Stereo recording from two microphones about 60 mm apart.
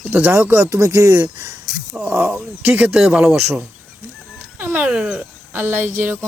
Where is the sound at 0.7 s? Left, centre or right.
Right.